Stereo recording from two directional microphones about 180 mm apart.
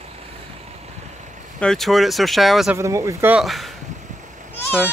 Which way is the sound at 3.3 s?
Centre (ahead or behind).